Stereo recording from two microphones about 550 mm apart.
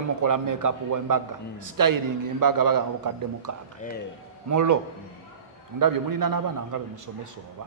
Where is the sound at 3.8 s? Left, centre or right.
Centre.